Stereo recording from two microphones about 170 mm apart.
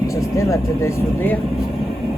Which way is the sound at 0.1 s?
20° left (ahead or behind).